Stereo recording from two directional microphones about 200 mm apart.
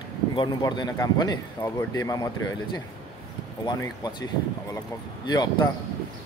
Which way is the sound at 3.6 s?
20° left (ahead or behind).